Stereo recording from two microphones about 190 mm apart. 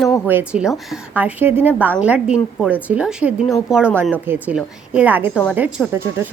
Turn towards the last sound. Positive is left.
turn(degrees=-10)  # may be behind; listen again after turning